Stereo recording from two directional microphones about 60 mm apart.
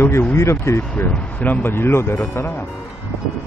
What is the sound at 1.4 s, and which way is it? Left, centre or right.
Speech, left.